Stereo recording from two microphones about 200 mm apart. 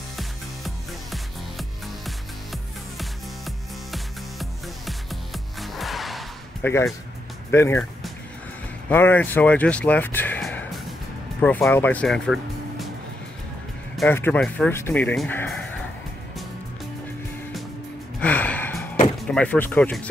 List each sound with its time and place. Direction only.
0.2 s music: centre (ahead or behind)
6.6 s speech: 15° left (ahead or behind)
8.8 s speech: 10° left (ahead or behind)
13.9 s speech: 10° left (ahead or behind)
18.2 s gasp: 10° left (ahead or behind)
19.2 s speech: 5° left (ahead or behind)